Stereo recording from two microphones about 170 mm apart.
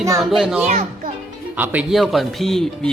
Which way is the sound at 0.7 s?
40° right (ahead or behind).